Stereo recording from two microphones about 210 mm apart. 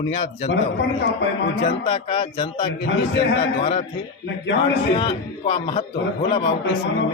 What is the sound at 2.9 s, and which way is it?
Speech, 55° left (ahead or behind).